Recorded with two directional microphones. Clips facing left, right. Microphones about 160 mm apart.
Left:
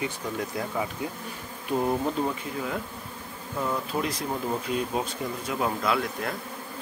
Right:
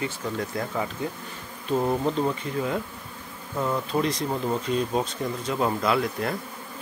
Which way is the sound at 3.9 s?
5° left (ahead or behind).